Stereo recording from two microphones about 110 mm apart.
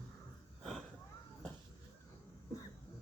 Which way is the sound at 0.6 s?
5° left (ahead or behind).